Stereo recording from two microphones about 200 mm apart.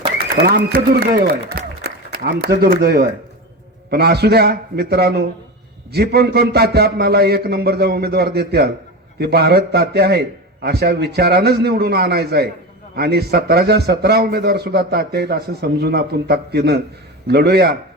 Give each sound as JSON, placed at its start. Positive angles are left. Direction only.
{"t": 0.4, "sound": "a man's voice", "side_deg": -45}